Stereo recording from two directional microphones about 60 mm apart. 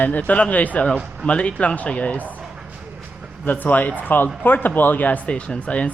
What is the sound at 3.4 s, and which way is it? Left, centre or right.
Speech, left.